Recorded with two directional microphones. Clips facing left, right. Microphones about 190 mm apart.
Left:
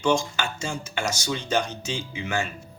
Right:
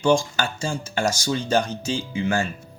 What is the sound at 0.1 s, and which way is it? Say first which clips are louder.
Speech: right 4 dB; 35° right (ahead or behind).